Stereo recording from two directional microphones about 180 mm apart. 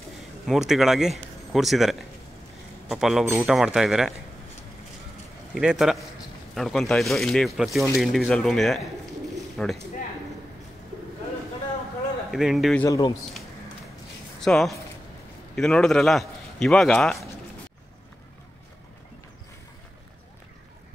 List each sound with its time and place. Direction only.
0.5 s speech: centre (ahead or behind)
5.5 s speech: 5° right (ahead or behind)
12.3 s speech: centre (ahead or behind)
12.8 s speech: 20° left (ahead or behind)
14.4 s a man's voice: centre (ahead or behind)